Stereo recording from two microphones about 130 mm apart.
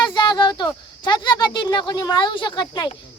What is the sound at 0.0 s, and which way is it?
Speech, 35° left (ahead or behind).